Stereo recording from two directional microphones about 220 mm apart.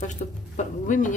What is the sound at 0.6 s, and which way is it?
Speech, 35° left (ahead or behind).